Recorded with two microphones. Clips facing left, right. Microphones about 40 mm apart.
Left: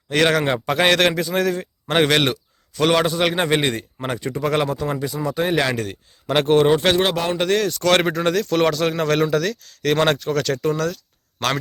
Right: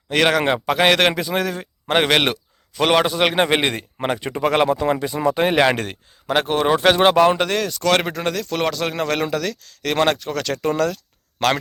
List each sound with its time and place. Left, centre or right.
0.1 s a man's voice: centre; by 5.7 s right
5.7 s a man's voice: right
6.2 s a man's voice: centre
10.3 s a man's voice: centre